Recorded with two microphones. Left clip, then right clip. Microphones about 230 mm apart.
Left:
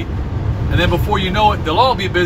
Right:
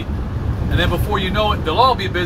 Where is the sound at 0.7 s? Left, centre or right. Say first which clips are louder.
Left 3 dB; centre.